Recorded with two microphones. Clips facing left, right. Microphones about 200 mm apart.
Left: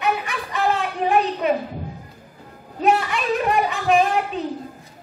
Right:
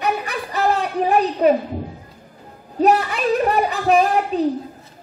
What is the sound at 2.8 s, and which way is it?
A woman's voice, 40° right (ahead or behind).